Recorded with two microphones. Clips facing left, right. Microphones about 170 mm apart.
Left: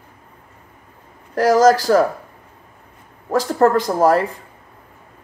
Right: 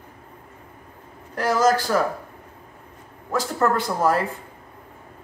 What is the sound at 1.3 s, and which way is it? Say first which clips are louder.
Speech: left 7 dB; 40° left (ahead or behind).